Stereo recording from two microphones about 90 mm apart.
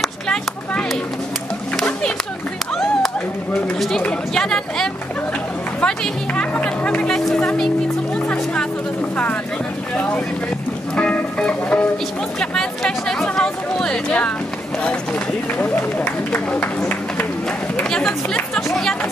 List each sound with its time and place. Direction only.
0.0 s a sound: 10° left (ahead or behind)
4.0 s speech: 5° left (ahead or behind)
5.8 s music: 15° left (ahead or behind)
7.2 s speech: 5° left (ahead or behind)
9.1 s speech: 15° left (ahead or behind)
11.0 s music: 10° left (ahead or behind)
12.4 s speech: 5° left (ahead or behind)
15.6 s speech: 20° left (ahead or behind)
17.7 s speech: 10° left (ahead or behind)